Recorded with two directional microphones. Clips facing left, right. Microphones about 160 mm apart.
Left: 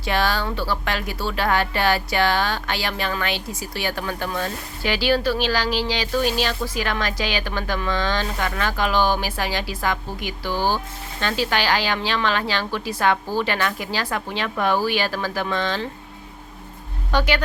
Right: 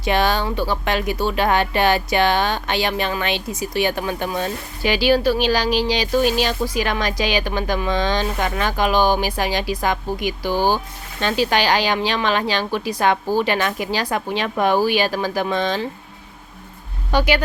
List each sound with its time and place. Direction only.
0.0 s speech: 20° right (ahead or behind)
17.1 s speech: 10° right (ahead or behind)